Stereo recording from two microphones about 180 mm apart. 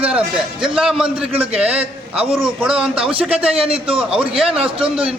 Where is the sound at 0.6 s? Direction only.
30° right (ahead or behind).